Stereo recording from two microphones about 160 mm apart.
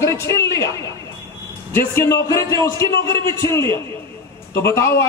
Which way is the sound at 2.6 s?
20° left (ahead or behind).